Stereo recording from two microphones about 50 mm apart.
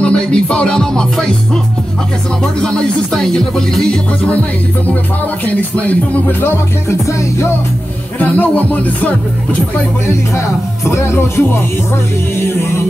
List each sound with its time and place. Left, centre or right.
0.0 s music: centre
2.4 s music: centre
4.2 s music: left
5.4 s speech: left
6.4 s music: left
7.1 s music: left
8.2 s speech: left
10.9 s speech: left